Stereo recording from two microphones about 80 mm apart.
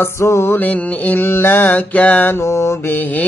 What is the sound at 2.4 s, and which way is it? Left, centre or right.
Mantra, left.